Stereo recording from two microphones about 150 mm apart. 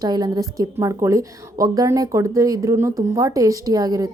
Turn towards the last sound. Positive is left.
turn(degrees=-25)  # may be behind; listen again after turning